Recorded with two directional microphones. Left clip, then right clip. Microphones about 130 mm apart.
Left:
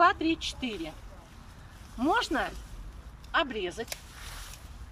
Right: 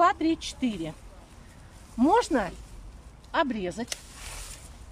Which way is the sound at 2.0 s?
50° right (ahead or behind).